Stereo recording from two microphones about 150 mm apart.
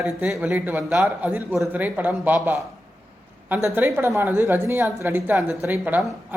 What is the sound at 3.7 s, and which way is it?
Speech, 15° right (ahead or behind).